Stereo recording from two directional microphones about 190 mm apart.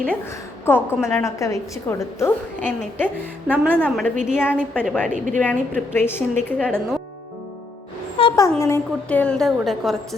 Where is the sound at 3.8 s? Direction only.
5° left (ahead or behind).